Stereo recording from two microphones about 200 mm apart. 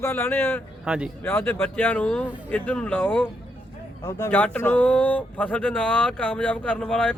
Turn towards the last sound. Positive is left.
turn(degrees=5)  # may be behind; listen again after turning